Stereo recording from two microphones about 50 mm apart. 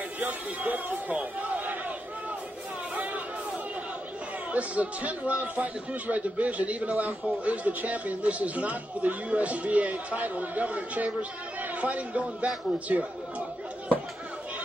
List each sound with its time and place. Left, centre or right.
0.2 s speech: right
4.5 s speech: right